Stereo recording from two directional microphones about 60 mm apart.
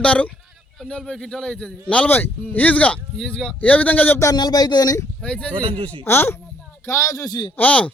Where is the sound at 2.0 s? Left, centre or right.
Left.